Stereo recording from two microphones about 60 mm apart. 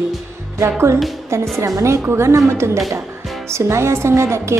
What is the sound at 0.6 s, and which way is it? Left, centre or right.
A woman's voice, right.